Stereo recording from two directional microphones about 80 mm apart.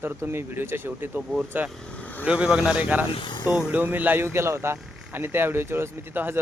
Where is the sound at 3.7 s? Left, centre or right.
Right.